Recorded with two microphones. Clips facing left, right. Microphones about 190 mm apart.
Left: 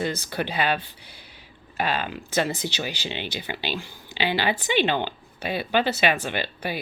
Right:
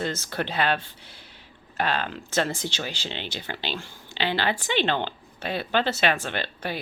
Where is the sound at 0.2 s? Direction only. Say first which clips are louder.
Even; 5° left (ahead or behind).